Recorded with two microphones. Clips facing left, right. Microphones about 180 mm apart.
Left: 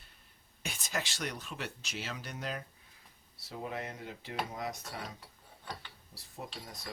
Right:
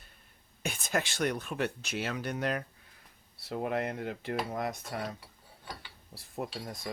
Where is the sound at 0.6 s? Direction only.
55° right (ahead or behind).